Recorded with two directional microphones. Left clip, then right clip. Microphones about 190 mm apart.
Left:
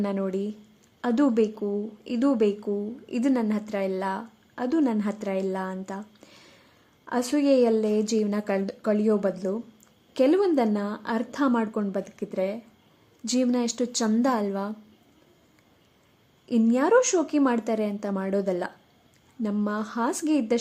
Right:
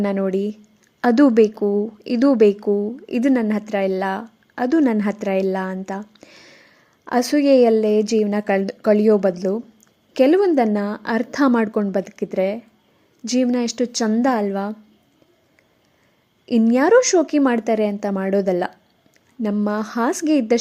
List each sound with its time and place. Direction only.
0.0 s a woman's voice: 20° right (ahead or behind)
16.5 s a woman's voice: 20° right (ahead or behind)